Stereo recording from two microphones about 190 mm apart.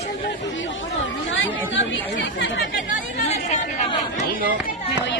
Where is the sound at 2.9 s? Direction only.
35° left (ahead or behind).